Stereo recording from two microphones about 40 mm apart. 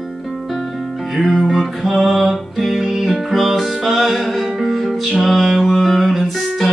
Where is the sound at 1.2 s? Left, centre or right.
Centre.